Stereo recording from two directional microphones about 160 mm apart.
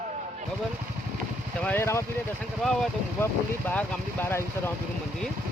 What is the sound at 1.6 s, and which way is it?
Speech, 10° left (ahead or behind).